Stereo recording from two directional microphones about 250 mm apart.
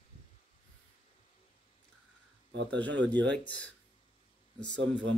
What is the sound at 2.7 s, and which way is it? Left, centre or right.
Speech, centre.